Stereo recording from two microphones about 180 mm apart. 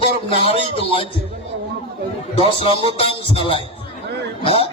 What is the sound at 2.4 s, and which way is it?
Speech, 30° left (ahead or behind).